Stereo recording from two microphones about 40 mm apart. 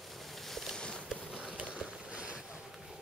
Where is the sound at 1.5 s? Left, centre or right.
Right.